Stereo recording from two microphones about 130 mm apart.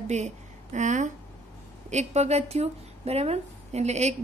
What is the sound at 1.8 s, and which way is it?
Speech, 60° right (ahead or behind).